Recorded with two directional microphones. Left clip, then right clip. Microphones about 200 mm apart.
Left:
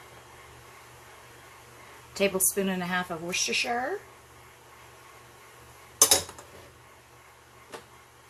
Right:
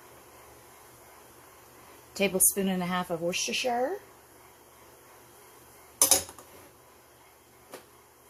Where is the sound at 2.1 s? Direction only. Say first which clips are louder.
Left 1 dB; 35° right (ahead or behind).